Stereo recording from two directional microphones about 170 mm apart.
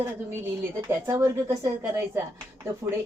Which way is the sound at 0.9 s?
15° right (ahead or behind).